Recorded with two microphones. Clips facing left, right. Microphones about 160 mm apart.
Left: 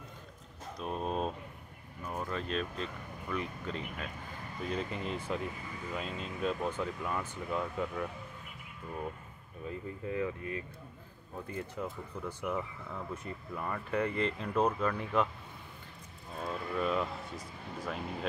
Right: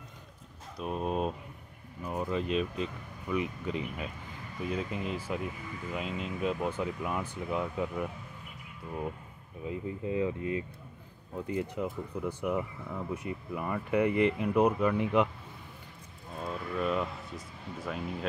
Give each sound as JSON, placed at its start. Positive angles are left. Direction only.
{"t": 0.7, "sound": "speech", "side_deg": -5}
{"t": 9.7, "sound": "speech", "side_deg": -15}
{"t": 16.3, "sound": "vehicle", "side_deg": 0}